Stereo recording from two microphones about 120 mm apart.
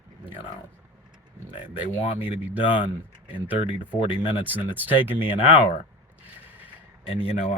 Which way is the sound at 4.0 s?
45° left (ahead or behind).